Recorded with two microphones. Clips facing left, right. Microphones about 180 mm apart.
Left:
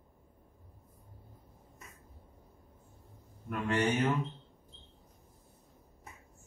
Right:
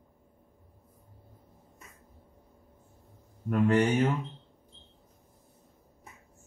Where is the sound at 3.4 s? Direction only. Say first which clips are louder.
Right 7 dB; 35° right (ahead or behind).